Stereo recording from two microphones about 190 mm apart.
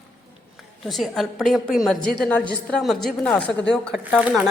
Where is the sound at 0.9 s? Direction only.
Centre (ahead or behind).